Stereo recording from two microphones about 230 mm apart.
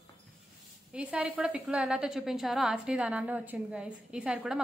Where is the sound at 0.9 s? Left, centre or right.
Centre.